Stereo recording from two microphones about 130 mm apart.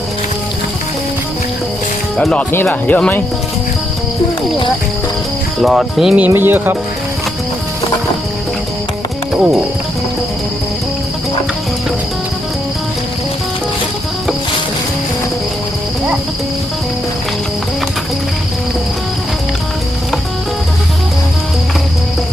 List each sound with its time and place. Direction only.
2.1 s speech: 10° left (ahead or behind)
5.5 s speech: centre (ahead or behind)
6.2 s speech: 15° right (ahead or behind)